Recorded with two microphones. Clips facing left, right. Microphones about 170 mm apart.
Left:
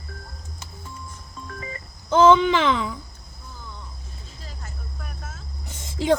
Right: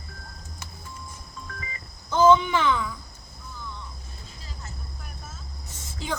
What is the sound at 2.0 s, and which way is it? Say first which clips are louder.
Speech: left 3 dB; 80° left.